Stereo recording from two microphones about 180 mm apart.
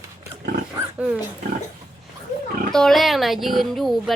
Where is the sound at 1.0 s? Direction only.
5° right (ahead or behind).